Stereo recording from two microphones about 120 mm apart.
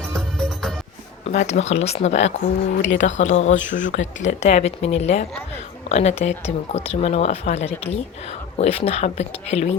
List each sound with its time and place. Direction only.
0.1 s music: 5° left (ahead or behind)
1.2 s speech: 70° left (ahead or behind)
2.8 s speech: 85° left; by 9.6 s 65° left (ahead or behind)